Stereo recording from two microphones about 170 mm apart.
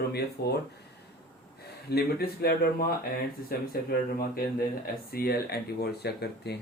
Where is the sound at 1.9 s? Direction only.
65° left (ahead or behind).